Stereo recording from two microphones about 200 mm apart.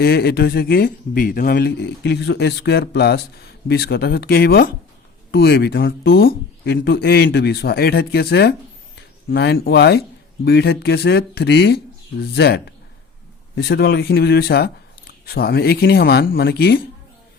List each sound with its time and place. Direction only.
0.0 s speech: 50° left (ahead or behind)